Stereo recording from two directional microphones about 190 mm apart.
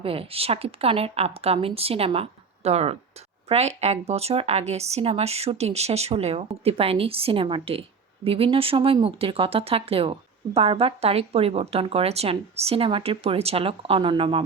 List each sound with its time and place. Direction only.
0.0 s speech: 30° right (ahead or behind)